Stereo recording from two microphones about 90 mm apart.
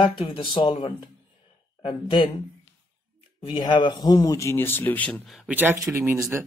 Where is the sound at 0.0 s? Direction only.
75° left (ahead or behind).